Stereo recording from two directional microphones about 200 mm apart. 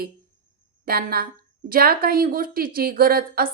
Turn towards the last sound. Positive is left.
turn(degrees=-45)  # may be behind; listen again after turning